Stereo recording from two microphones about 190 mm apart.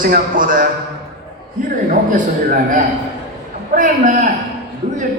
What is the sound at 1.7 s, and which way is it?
A man's voice, 45° right (ahead or behind).